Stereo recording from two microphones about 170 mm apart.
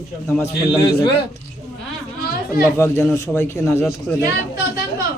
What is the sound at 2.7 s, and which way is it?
A man's voice, 15° left (ahead or behind).